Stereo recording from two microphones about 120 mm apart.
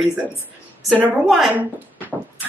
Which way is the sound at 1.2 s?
Centre (ahead or behind).